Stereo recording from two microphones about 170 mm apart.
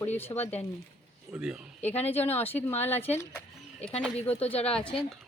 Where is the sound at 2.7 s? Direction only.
40° left (ahead or behind).